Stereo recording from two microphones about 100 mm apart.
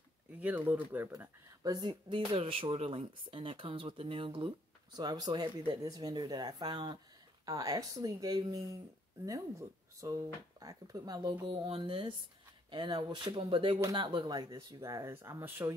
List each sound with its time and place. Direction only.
0.4 s speech: 15° right (ahead or behind)
1.6 s speech: 45° right (ahead or behind); by 4.6 s 60° right (ahead or behind)
4.9 s speech: 40° right (ahead or behind)
5.8 s speech: 40° right (ahead or behind)
7.4 s speech: 35° right (ahead or behind)
11.4 s speech: 55° right (ahead or behind)
13.3 s speech: 65° right (ahead or behind)
13.9 s speech: 50° right (ahead or behind); by 15.7 s 30° right (ahead or behind)